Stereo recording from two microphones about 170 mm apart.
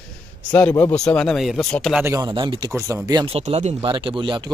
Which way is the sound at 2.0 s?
20° right (ahead or behind).